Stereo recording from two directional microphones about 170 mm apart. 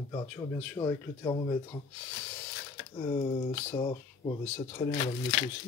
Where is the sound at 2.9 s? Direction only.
30° left (ahead or behind).